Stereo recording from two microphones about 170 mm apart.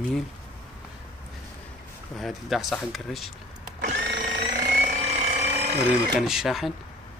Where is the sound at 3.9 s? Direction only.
90° right.